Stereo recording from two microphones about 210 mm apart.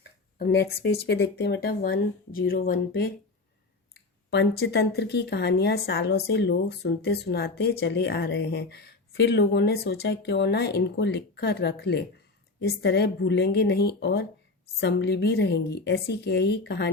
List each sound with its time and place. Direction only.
0.3 s speech: 50° left (ahead or behind)